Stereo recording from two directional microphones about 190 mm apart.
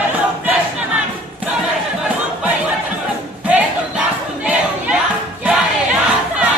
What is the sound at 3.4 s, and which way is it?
Crowd, 10° right (ahead or behind).